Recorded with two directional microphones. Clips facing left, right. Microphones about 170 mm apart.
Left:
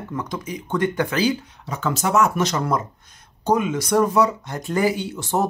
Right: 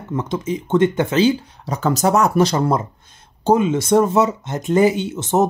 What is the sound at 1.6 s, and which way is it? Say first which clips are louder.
Speech: right 6 dB; 40° right (ahead or behind).